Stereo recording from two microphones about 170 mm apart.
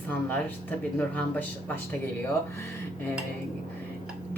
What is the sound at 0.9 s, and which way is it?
Speech, 10° left (ahead or behind).